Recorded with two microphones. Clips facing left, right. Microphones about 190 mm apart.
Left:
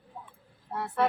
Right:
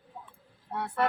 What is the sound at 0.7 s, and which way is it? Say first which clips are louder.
Speech: left 1 dB; centre (ahead or behind).